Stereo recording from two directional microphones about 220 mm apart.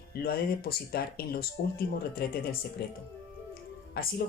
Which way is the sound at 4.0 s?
45° left (ahead or behind).